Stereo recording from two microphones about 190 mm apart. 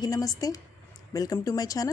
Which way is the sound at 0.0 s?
20° left (ahead or behind).